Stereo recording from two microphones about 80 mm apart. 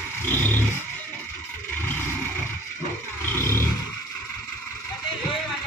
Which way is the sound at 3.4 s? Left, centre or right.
Left.